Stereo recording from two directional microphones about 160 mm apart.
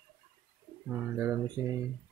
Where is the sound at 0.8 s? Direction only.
15° right (ahead or behind).